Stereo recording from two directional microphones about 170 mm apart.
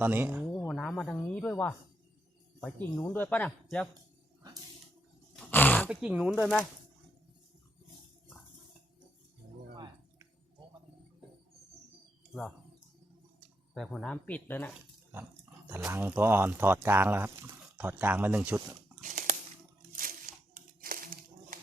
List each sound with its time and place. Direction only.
0.0 s speech: 10° right (ahead or behind)
0.5 s music: 10° left (ahead or behind)
1.4 s speech: 10° left (ahead or behind)
5.4 s a sound: 10° left (ahead or behind)
5.9 s speech: 5° right (ahead or behind)
9.7 s music: 25° right (ahead or behind)
12.3 s speech: centre (ahead or behind)
13.7 s speech: centre (ahead or behind)
15.7 s speech: 15° right (ahead or behind)
19.0 s a sound: 50° right (ahead or behind)